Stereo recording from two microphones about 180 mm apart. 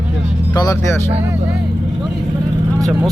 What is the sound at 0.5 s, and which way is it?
Speech, 20° left (ahead or behind).